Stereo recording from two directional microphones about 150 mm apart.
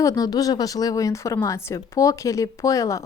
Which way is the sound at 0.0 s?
25° left (ahead or behind).